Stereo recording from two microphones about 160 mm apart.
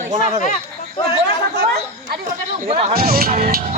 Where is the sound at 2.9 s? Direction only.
70° right (ahead or behind).